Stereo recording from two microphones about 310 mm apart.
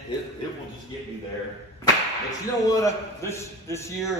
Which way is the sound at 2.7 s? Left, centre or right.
Centre.